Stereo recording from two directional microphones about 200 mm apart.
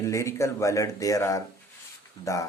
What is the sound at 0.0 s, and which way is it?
Speech, 15° left (ahead or behind).